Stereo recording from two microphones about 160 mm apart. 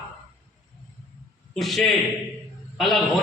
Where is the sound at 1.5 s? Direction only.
Centre (ahead or behind).